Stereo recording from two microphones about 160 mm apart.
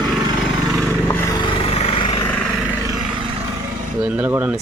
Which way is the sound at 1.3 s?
40° left (ahead or behind).